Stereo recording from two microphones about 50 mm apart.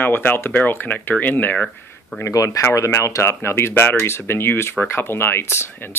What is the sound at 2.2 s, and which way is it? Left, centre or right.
Speech, left.